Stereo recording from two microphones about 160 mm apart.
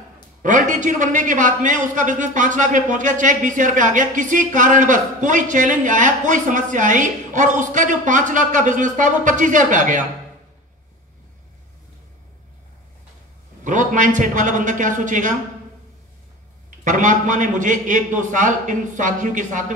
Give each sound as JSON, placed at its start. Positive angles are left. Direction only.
{"t": 0.4, "sound": "a man's voice", "side_deg": -50}
{"t": 13.7, "sound": "a man's voice", "side_deg": -50}
{"t": 16.8, "sound": "a man's voice", "side_deg": -50}